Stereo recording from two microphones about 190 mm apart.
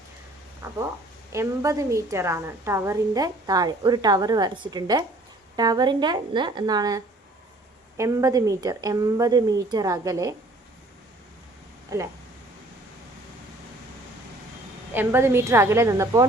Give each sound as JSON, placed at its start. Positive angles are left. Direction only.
{"t": 1.3, "sound": "a woman's voice", "side_deg": -15}
{"t": 11.9, "sound": "a woman's voice", "side_deg": -20}
{"t": 14.9, "sound": "a woman's voice", "side_deg": -10}